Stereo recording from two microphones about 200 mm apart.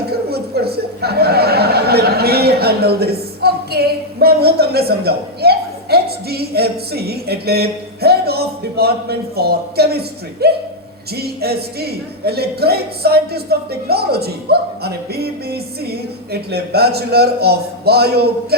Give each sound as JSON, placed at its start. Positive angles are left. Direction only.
{"t": 0.1, "sound": "chuckle", "side_deg": -50}
{"t": 11.1, "sound": "speech", "side_deg": -50}